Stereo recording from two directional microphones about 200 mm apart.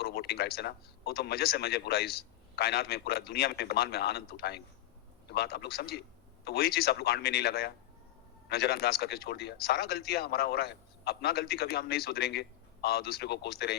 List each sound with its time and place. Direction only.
0.0 s speech: 50° left (ahead or behind)